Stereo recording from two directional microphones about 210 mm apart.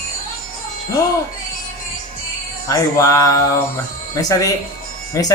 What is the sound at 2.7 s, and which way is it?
Speech, 15° left (ahead or behind).